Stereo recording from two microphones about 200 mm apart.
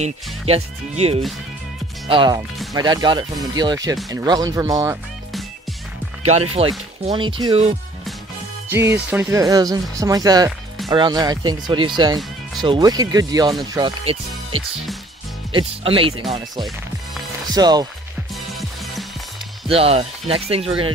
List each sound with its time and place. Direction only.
0.0 s speech: 30° right (ahead or behind)
7.1 s speech: 25° right (ahead or behind)
8.6 s speech: 10° right (ahead or behind)
15.5 s speech: 25° right (ahead or behind)
19.7 s speech: 30° right (ahead or behind)